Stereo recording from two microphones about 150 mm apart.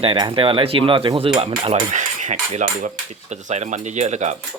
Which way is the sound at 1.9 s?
55° right (ahead or behind).